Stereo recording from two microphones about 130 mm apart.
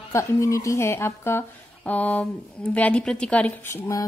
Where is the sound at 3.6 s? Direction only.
20° left (ahead or behind).